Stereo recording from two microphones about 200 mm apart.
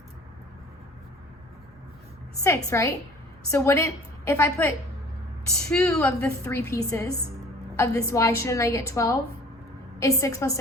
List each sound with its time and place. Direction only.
2.4 s a woman's voice: 15° left (ahead or behind)
5.7 s a woman's voice: 5° left (ahead or behind)